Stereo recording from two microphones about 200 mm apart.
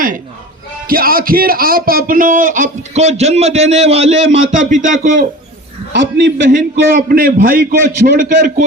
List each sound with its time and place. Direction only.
0.9 s speech: 45° right (ahead or behind)
5.9 s a man's voice: 60° right (ahead or behind)
6.5 s a man's voice: 45° right (ahead or behind)